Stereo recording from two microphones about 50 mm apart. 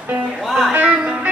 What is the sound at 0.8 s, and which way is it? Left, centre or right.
Speech, centre.